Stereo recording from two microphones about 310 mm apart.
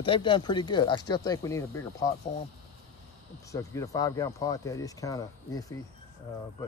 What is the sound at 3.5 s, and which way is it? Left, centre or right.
Speech, centre.